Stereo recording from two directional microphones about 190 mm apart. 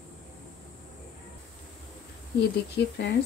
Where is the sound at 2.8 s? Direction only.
70° left (ahead or behind).